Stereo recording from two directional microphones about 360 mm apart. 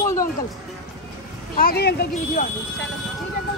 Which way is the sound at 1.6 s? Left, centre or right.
Left.